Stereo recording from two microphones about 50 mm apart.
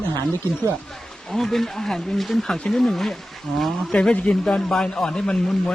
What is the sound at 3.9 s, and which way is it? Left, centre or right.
A man's voice, centre.